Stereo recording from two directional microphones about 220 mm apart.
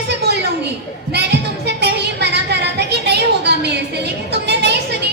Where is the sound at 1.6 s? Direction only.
50° right (ahead or behind).